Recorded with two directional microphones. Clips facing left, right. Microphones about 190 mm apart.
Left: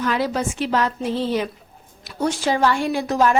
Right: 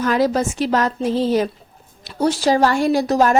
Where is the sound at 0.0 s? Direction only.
40° right (ahead or behind).